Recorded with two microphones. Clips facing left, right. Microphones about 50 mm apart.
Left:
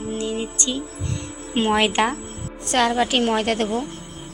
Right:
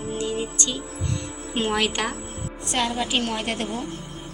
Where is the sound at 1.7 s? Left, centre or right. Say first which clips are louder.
Left 7 dB; left.